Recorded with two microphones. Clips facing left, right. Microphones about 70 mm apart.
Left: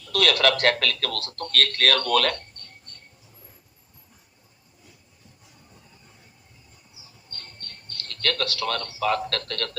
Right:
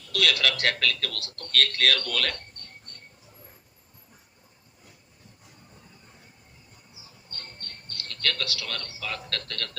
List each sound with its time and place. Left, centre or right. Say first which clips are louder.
0.0 s speech: left 5 dB; left
7.9 s speech: left 4 dB; left